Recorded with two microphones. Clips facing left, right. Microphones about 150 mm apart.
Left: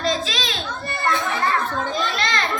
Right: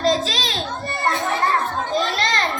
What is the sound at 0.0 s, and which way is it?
Children playing, 40° right (ahead or behind).